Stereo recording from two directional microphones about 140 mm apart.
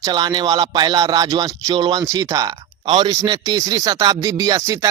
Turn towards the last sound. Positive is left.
turn(degrees=-25)  # may be behind; listen again after turning